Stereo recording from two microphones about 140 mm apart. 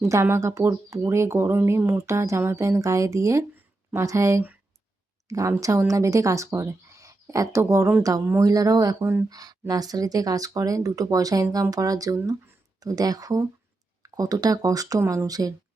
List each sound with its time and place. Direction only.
0.1 s speech: 20° right (ahead or behind)